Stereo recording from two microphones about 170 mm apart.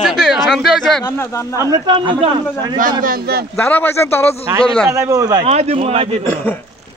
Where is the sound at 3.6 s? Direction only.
10° left (ahead or behind).